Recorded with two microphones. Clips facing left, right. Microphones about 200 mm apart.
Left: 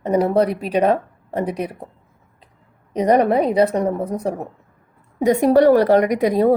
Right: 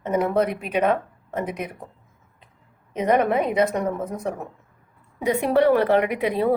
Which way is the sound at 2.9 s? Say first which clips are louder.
Left 4 dB; 35° left (ahead or behind).